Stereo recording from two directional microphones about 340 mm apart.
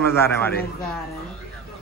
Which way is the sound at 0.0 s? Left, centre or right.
Centre.